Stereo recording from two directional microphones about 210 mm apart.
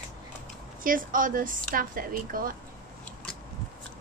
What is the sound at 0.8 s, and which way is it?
Speech, 40° right (ahead or behind).